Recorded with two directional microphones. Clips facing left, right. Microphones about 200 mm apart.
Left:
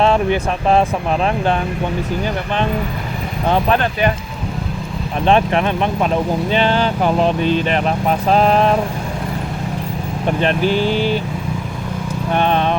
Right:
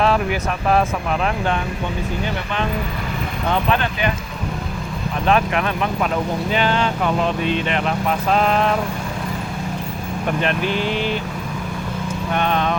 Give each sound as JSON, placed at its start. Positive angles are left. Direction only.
{"t": 0.0, "sound": "speech", "side_deg": 25}
{"t": 3.4, "sound": "speech", "side_deg": 40}
{"t": 5.2, "sound": "speech", "side_deg": 30}
{"t": 10.2, "sound": "speech", "side_deg": 35}
{"t": 12.3, "sound": "speech", "side_deg": 30}